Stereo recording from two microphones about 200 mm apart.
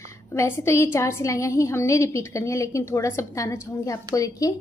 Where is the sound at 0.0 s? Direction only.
15° left (ahead or behind).